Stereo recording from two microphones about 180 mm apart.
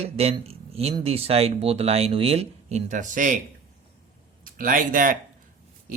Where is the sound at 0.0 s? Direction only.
35° right (ahead or behind).